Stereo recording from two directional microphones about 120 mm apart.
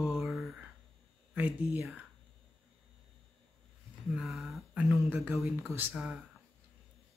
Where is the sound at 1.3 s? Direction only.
15° right (ahead or behind).